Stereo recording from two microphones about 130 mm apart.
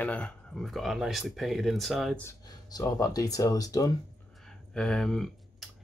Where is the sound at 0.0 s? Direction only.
10° left (ahead or behind).